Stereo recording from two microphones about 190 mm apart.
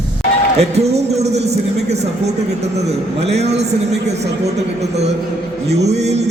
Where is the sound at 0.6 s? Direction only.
35° right (ahead or behind).